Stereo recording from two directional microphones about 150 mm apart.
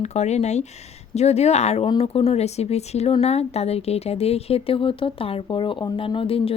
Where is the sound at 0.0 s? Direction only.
50° left (ahead or behind).